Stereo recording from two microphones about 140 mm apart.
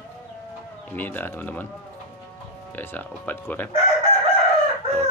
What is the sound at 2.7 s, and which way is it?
Speech, 10° left (ahead or behind).